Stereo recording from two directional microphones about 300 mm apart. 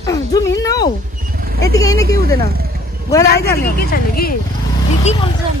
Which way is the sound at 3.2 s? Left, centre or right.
Left.